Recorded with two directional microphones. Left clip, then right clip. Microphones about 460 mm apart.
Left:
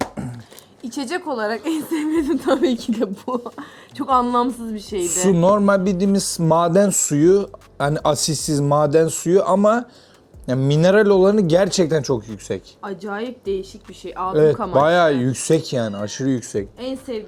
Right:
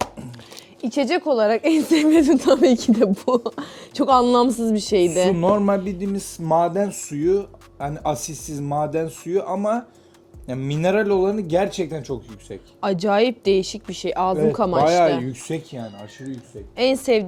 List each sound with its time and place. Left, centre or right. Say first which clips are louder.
0.9 s a woman's voice: right 5 dB; right
2.4 s speech: right 3 dB; right
5.2 s speech: left 2 dB; centre
12.8 s speech: right 9 dB; right
14.8 s speech: left 2 dB; left
16.7 s a woman's voice: right 10 dB; right